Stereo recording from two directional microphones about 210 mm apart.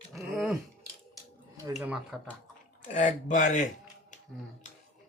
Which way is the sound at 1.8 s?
5° right (ahead or behind).